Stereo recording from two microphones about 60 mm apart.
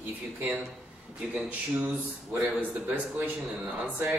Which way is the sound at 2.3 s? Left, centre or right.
Right.